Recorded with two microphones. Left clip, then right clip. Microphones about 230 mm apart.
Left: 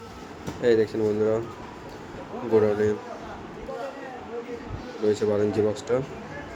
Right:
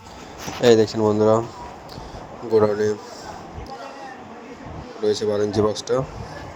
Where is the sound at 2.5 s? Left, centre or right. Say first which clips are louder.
Right 3 dB; right.